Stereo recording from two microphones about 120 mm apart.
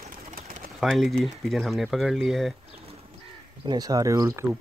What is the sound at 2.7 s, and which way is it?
Bird, 55° right (ahead or behind).